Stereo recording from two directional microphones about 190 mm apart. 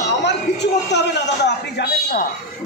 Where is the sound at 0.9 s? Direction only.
65° left (ahead or behind).